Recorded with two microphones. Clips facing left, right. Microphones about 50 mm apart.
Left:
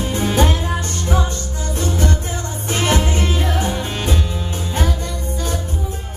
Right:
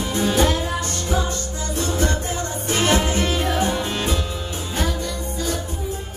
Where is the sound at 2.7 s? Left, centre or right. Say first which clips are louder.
Left 1 dB; left.